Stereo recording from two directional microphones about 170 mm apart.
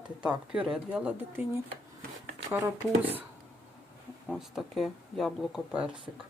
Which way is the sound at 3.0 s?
10° right (ahead or behind).